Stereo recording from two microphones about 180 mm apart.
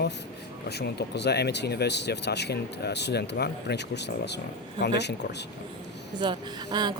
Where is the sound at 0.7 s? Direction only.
65° left (ahead or behind).